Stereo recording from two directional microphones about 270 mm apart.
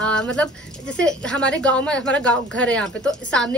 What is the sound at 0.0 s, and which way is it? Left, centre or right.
Speech, centre.